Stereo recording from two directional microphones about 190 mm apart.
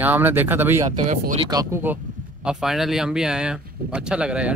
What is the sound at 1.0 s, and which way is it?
Speech, 40° right (ahead or behind).